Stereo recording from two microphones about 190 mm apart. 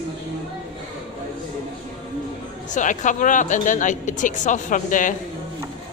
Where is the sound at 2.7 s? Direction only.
40° left (ahead or behind).